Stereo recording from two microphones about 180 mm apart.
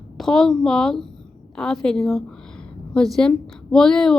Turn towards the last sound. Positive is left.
turn(degrees=5)  # may be behind; listen again after turning